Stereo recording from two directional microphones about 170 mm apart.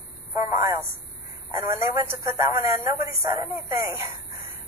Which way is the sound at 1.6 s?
15° right (ahead or behind).